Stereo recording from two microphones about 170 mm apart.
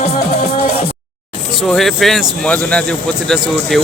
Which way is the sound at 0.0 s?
40° left (ahead or behind).